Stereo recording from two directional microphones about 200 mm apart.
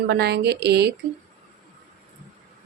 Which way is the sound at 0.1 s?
55° right (ahead or behind).